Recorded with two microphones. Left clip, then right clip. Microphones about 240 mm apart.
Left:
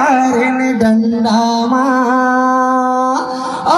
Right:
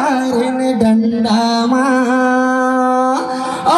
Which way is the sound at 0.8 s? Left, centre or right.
Right.